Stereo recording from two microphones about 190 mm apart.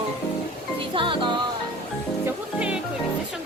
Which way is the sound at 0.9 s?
25° right (ahead or behind).